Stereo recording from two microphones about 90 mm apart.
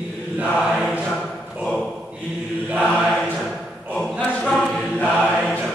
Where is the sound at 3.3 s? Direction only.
Centre (ahead or behind).